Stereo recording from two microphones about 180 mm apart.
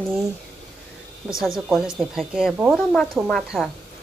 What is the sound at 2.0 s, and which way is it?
Speech, centre (ahead or behind).